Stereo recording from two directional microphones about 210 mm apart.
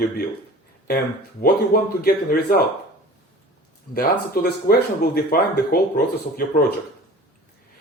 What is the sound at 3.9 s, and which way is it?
Speech, 50° left (ahead or behind).